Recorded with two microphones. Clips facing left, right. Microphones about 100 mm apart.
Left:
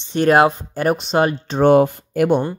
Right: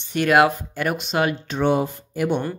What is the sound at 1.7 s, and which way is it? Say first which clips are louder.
Speech: left 9 dB; 60° left (ahead or behind).